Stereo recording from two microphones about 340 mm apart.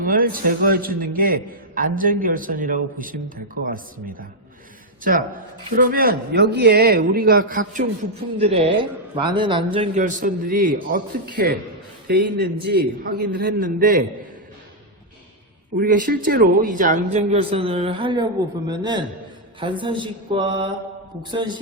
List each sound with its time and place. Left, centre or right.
0.0 s a man's voice: right
5.7 s a man's voice: right
15.8 s a man's voice: right